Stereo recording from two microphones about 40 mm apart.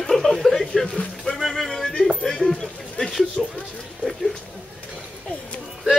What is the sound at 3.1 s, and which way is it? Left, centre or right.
Speech, centre.